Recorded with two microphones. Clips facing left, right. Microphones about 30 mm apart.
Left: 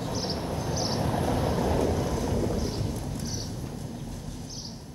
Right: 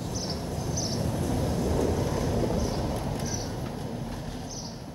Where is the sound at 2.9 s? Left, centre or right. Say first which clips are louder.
Right 3 dB; right.